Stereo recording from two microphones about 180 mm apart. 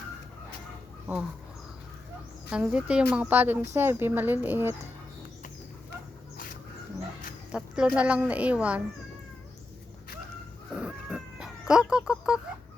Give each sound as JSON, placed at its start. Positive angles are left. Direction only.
{"t": 2.5, "sound": "speech", "side_deg": -5}
{"t": 6.3, "sound": "a sound", "side_deg": 50}
{"t": 7.5, "sound": "a woman's voice", "side_deg": -5}
{"t": 10.8, "sound": "cat", "side_deg": -5}